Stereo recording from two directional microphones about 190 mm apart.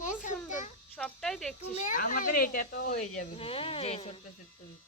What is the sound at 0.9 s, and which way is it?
Insect, 5° left (ahead or behind).